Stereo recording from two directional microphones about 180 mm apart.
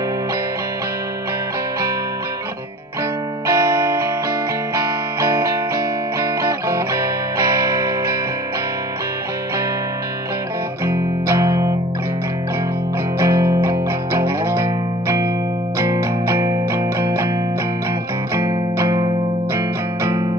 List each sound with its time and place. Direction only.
3.4 s music: 15° right (ahead or behind)
10.9 s music: 15° right (ahead or behind)
13.2 s music: 15° right (ahead or behind)
18.3 s music: 20° right (ahead or behind)